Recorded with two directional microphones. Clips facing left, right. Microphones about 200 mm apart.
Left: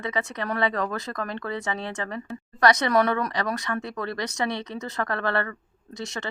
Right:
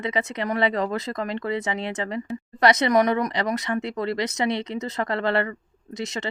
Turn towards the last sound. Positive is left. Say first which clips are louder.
# right 3 dB
turn(degrees=-20)  # may be behind; listen again after turning